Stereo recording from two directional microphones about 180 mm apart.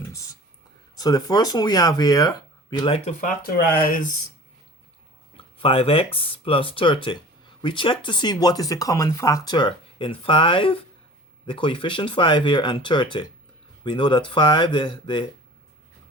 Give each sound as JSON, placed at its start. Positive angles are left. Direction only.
{"t": 0.1, "sound": "speech", "side_deg": 20}
{"t": 3.2, "sound": "speech", "side_deg": 45}
{"t": 5.4, "sound": "speech", "side_deg": 30}